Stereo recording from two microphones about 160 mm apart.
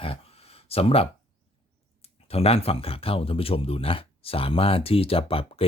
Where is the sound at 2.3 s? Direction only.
40° left (ahead or behind).